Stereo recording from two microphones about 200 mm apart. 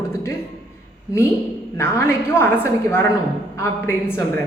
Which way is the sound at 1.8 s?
10° left (ahead or behind).